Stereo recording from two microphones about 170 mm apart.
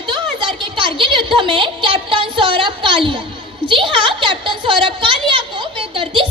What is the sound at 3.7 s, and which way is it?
A woman's voice, 30° right (ahead or behind).